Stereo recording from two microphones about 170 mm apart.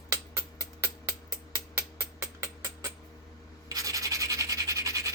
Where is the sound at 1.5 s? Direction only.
15° right (ahead or behind).